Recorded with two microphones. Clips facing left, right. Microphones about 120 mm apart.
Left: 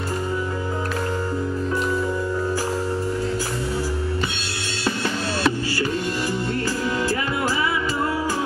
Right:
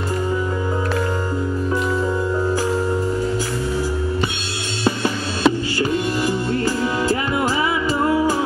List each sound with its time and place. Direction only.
4.8 s music: 20° right (ahead or behind)